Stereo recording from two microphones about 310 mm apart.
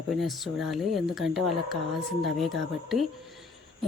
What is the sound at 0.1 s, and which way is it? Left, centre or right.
Speech, centre.